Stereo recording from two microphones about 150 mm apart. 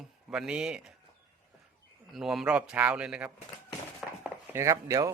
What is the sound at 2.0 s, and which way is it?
A man's voice, centre (ahead or behind).